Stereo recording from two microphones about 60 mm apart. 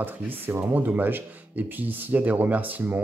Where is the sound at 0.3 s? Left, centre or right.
Right.